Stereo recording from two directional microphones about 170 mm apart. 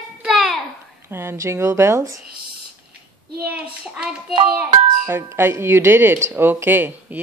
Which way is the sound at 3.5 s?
5° right (ahead or behind).